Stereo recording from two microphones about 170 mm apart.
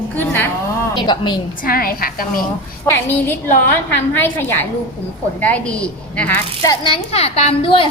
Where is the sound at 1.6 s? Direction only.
60° left (ahead or behind).